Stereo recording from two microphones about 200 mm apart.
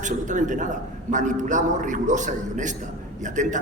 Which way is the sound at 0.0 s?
40° right (ahead or behind).